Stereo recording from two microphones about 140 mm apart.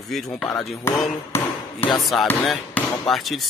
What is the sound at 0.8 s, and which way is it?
Speech, 20° left (ahead or behind).